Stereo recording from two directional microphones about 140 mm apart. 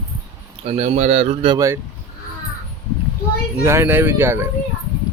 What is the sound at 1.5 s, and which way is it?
Speech, 20° right (ahead or behind).